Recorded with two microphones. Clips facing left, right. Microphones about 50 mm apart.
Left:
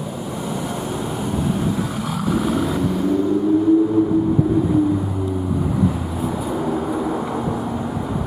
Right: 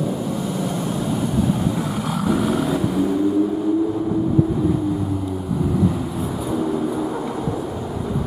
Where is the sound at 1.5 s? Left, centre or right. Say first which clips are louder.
Even; centre.